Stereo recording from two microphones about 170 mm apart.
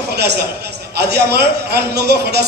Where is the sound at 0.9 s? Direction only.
75° right (ahead or behind).